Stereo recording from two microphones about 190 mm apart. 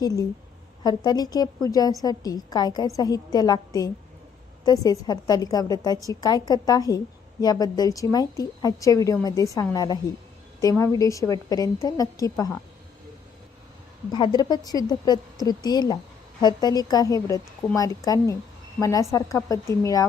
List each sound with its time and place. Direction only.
0.0 s a woman's voice: 20° left (ahead or behind)
14.1 s a woman's voice: 20° left (ahead or behind)